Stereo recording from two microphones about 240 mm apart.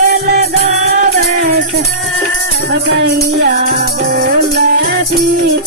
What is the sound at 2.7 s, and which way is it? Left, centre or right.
Music, right.